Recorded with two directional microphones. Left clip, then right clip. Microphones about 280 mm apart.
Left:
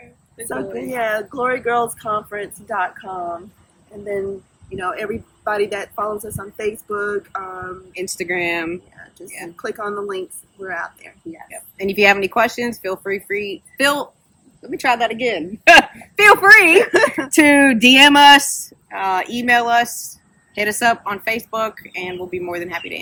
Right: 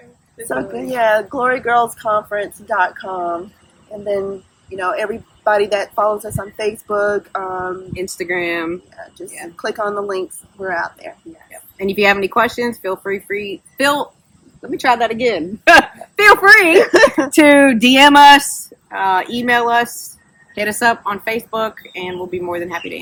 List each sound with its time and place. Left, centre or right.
0.4 s a woman's voice: centre
4.8 s a woman's voice: right
7.9 s speech: centre
9.6 s a woman's voice: centre
11.8 s speech: centre
16.8 s a woman's voice: right
17.3 s speech: centre